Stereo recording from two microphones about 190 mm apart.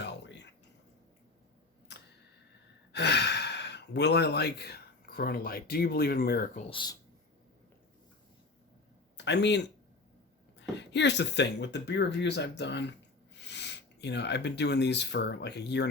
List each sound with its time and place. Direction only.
0.0 s a sound: 65° left (ahead or behind)
2.9 s speech: 60° left (ahead or behind)
6.7 s speech: 25° left (ahead or behind)
9.1 s speech: 65° left (ahead or behind)